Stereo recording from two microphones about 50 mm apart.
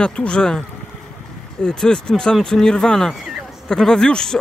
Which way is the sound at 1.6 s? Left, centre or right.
Centre.